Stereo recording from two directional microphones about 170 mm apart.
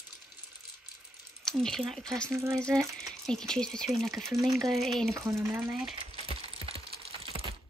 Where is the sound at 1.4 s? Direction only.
5° left (ahead or behind).